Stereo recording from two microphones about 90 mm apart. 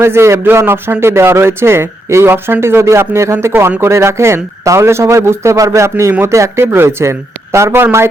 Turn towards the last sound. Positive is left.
turn(degrees=-30)  # may be behind; listen again after turning